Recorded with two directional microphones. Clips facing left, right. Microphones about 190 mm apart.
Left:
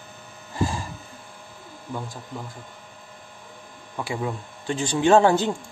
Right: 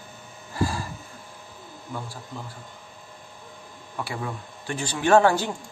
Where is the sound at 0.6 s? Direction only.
20° left (ahead or behind).